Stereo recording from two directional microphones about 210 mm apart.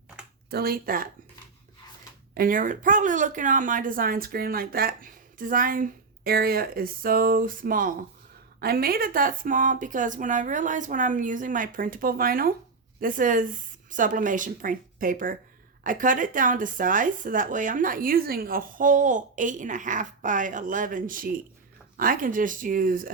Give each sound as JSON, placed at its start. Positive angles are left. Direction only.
{"t": 0.5, "sound": "speech", "side_deg": -45}
{"t": 2.3, "sound": "speech", "side_deg": -45}